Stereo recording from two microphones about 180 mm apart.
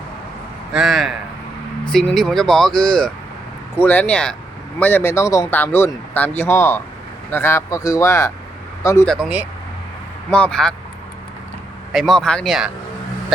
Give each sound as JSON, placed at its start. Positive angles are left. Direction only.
{"t": 0.7, "sound": "speech", "side_deg": 0}
{"t": 9.0, "sound": "speech", "side_deg": -5}
{"t": 10.2, "sound": "speech", "side_deg": 5}
{"t": 11.9, "sound": "speech", "side_deg": 0}